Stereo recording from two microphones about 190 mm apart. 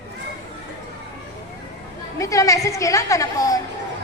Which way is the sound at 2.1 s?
15° left (ahead or behind).